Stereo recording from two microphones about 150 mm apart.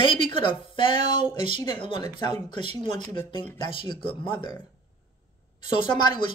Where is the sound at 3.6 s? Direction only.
35° left (ahead or behind).